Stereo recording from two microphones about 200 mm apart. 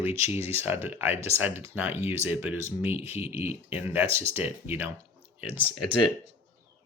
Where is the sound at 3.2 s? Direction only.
30° left (ahead or behind).